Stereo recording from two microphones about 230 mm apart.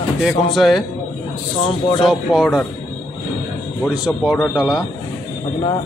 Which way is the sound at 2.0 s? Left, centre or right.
Centre.